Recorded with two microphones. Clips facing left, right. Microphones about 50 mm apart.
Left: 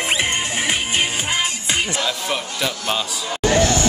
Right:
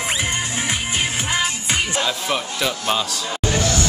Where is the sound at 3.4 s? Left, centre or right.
Left.